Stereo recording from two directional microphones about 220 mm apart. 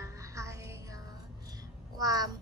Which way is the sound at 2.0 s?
15° right (ahead or behind).